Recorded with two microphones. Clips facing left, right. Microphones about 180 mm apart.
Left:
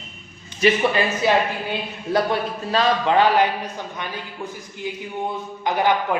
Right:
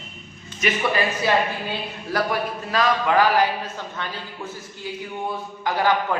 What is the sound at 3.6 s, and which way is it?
Speech, 15° left (ahead or behind).